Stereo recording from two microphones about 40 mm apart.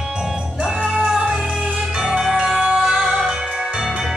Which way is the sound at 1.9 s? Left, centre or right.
Right.